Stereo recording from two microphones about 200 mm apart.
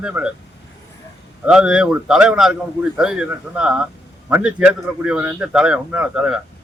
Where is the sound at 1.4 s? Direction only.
5° right (ahead or behind).